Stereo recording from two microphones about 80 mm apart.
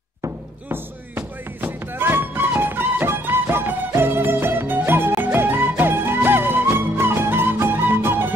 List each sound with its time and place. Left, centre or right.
0.7 s music: right